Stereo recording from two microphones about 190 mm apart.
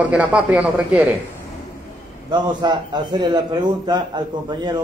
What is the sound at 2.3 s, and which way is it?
A man's voice, 25° right (ahead or behind).